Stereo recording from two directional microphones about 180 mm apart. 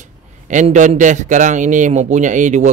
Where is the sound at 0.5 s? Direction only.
40° right (ahead or behind).